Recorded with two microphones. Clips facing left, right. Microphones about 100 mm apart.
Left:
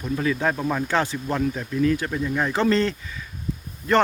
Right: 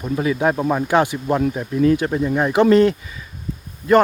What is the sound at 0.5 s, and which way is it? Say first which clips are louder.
Speech: right 6 dB; 25° right (ahead or behind).